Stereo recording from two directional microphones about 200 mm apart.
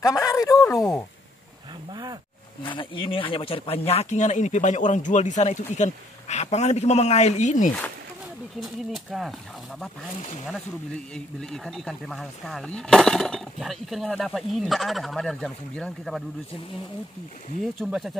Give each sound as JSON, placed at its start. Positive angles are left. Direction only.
{"t": 0.0, "sound": "a sound", "side_deg": 15}
{"t": 0.7, "sound": "speech", "side_deg": 15}
{"t": 2.6, "sound": "speech", "side_deg": 25}
{"t": 8.5, "sound": "speech", "side_deg": 0}
{"t": 10.1, "sound": "speech", "side_deg": 35}
{"t": 11.1, "sound": "speech", "side_deg": 5}
{"t": 17.7, "sound": "speech", "side_deg": 0}